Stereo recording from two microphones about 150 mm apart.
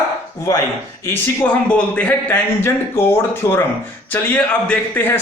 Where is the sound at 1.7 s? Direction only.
10° left (ahead or behind).